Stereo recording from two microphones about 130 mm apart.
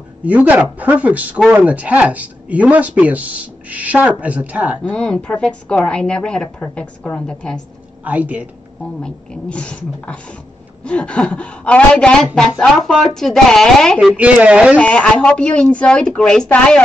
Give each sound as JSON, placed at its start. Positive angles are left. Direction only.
{"t": 0.2, "sound": "speech", "side_deg": -10}
{"t": 4.8, "sound": "a woman's voice", "side_deg": 10}
{"t": 8.0, "sound": "speech", "side_deg": -10}
{"t": 9.0, "sound": "a woman's voice", "side_deg": 5}
{"t": 13.9, "sound": "speech", "side_deg": -10}
{"t": 14.8, "sound": "a woman's voice", "side_deg": 10}